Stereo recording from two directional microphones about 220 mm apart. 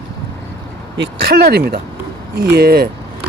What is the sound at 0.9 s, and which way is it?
Speech, 50° right (ahead or behind).